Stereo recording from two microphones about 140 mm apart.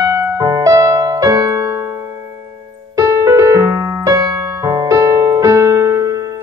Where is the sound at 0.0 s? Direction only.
20° right (ahead or behind).